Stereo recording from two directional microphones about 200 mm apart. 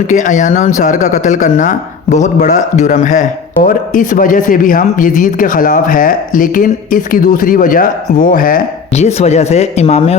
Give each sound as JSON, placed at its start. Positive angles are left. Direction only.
{"t": 0.1, "sound": "speech", "side_deg": 40}
{"t": 9.0, "sound": "speech", "side_deg": 35}